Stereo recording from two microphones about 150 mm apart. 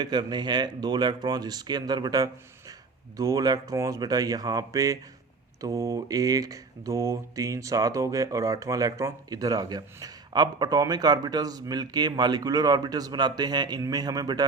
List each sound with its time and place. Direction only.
0.0 s mantra: 30° right (ahead or behind)